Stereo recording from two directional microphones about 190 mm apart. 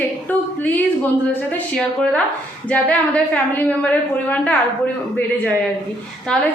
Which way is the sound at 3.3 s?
10° left (ahead or behind).